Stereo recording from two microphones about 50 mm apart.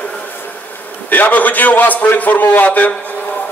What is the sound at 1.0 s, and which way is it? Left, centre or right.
A man's voice, left.